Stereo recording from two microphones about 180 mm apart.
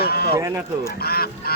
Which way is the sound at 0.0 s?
60° left (ahead or behind).